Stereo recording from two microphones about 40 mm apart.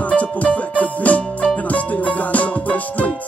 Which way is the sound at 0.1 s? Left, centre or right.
Left.